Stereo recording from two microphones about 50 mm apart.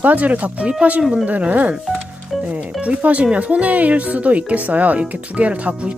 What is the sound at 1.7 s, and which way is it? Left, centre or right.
Music, centre.